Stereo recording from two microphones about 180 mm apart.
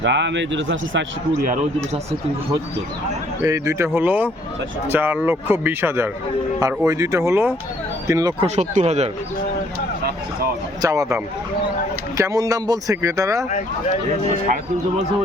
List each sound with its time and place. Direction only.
0.0 s speech: 85° right
3.4 s speech: 15° right (ahead or behind)
8.4 s speech: 40° right (ahead or behind)
10.8 s speech: 20° right (ahead or behind)